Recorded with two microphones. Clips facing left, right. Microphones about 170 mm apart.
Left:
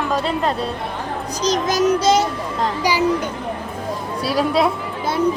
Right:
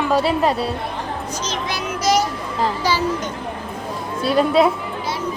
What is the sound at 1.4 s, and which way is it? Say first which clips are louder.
Speech: left 11 dB; 40° left (ahead or behind).